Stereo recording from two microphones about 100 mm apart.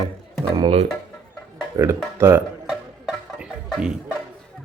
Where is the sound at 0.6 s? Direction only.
90° right.